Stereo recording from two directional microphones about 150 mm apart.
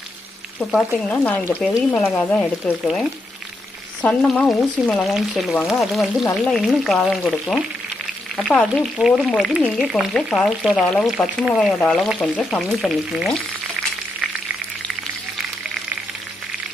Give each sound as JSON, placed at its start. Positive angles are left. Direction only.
{"t": 0.9, "sound": "speech", "side_deg": 10}
{"t": 4.0, "sound": "speech", "side_deg": 10}